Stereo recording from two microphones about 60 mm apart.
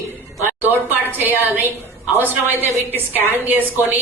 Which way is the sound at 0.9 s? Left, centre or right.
Right.